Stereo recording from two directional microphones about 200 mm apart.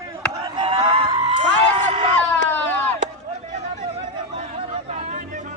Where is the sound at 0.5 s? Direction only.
25° right (ahead or behind).